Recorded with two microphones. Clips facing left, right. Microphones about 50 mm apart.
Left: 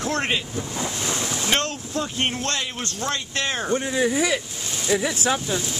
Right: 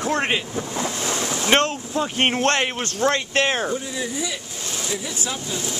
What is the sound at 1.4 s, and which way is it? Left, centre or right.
Speech, right.